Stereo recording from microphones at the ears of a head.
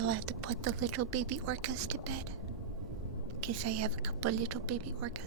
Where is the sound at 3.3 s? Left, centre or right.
Right.